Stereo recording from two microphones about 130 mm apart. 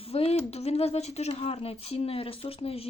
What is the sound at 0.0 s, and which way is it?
Speech, 50° left (ahead or behind).